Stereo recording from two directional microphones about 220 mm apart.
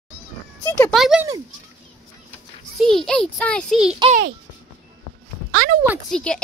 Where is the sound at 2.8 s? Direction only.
Centre (ahead or behind).